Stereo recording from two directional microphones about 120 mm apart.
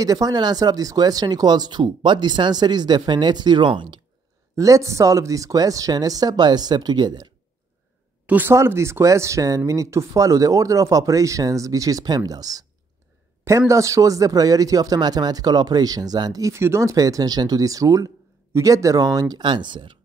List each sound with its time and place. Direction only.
0.0 s speech: 30° right (ahead or behind)
4.6 s speech: 25° right (ahead or behind)
8.3 s speech: 15° right (ahead or behind); by 20.0 s 40° right (ahead or behind)